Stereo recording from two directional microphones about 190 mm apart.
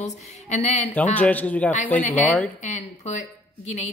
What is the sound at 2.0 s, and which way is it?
Speech, 40° left (ahead or behind).